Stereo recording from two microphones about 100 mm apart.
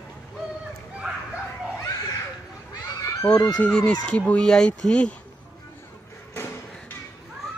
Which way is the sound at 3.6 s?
10° left (ahead or behind).